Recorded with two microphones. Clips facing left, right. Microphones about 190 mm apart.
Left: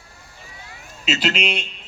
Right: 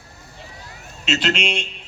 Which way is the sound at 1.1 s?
5° left (ahead or behind).